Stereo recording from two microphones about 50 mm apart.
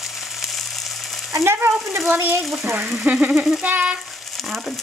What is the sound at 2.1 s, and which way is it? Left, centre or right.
Speech, right.